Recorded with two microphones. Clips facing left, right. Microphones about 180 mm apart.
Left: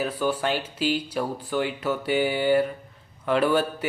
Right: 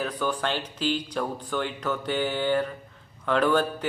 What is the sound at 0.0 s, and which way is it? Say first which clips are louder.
A man's voice: left 3 dB; 10° left (ahead or behind).